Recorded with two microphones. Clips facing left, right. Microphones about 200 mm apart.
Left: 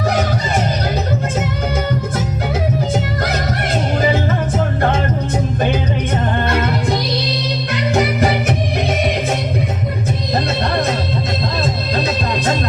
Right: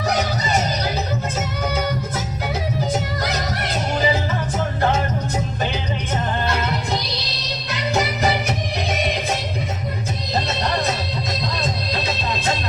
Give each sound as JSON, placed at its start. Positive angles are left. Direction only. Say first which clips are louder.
{"t": 7.9, "sound": "music", "louder": "left 4 dB", "side_deg": 55}